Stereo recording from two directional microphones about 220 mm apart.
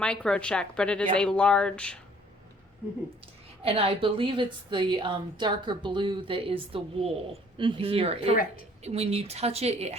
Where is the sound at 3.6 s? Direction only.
25° right (ahead or behind).